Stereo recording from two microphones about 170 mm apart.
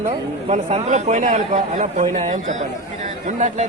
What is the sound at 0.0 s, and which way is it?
A man's voice, 40° right (ahead or behind).